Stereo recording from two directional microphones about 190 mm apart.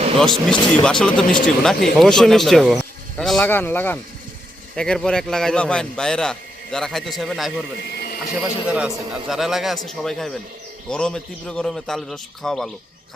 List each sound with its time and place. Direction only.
0.2 s a man's voice: centre (ahead or behind)
7.9 s a sound: 55° left (ahead or behind)
8.4 s a man's voice: 5° right (ahead or behind)